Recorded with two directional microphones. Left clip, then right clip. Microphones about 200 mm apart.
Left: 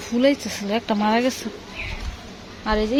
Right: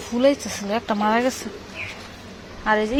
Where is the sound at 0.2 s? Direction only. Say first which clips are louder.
Right 1 dB; 15° left (ahead or behind).